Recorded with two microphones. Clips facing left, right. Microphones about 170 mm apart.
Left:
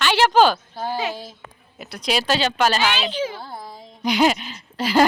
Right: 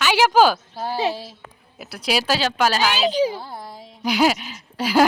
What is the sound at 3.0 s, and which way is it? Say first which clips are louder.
Speech: right 6 dB; 40° right (ahead or behind).